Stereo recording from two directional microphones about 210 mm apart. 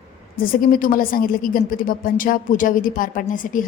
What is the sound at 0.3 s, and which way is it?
A woman's voice, 45° left (ahead or behind).